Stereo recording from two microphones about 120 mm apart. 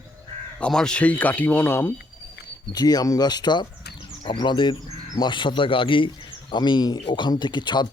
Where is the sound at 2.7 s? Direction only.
35° left (ahead or behind).